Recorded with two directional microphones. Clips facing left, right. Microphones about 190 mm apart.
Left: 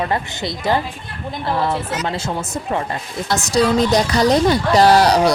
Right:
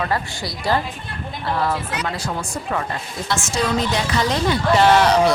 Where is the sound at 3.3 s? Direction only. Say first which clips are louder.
Left 6 dB; 40° left (ahead or behind).